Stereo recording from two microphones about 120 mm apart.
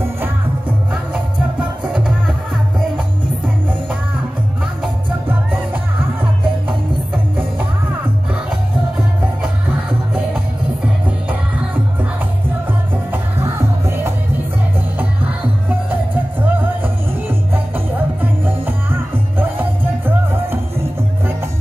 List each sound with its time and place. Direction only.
0.2 s music: 10° right (ahead or behind)
8.5 s music: 5° right (ahead or behind)
13.1 s music: 20° right (ahead or behind)
15.9 s music: 15° right (ahead or behind)